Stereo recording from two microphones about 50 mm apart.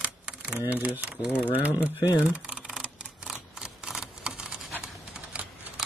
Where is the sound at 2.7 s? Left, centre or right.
Centre.